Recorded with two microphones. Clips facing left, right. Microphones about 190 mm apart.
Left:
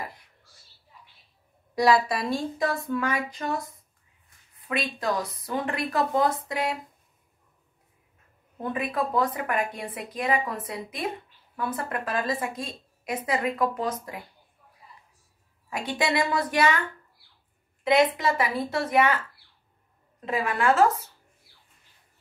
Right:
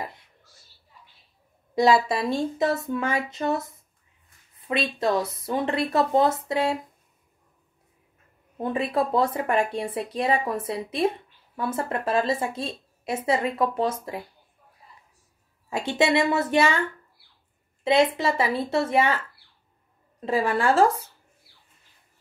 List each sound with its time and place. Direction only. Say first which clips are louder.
1.8 s a woman's voice: right 2 dB; 25° right (ahead or behind)
8.7 s a woman's voice: right 3 dB; 30° right (ahead or behind)
15.7 s a woman's voice: right 5 dB; 25° right (ahead or behind)
17.8 s a woman's voice: right 1 dB; 30° right (ahead or behind)
20.2 s a woman's voice: right 2 dB; 30° right (ahead or behind)